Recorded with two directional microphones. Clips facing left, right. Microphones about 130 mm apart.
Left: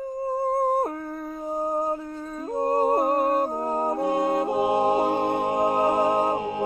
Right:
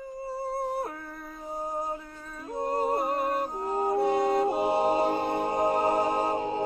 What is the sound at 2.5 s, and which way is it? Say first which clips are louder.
Music: left 6 dB; 45° left (ahead or behind).